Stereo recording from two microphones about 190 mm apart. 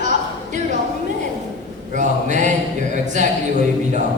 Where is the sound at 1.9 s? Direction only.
40° right (ahead or behind).